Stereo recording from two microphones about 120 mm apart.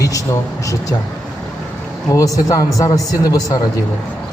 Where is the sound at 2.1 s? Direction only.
30° left (ahead or behind).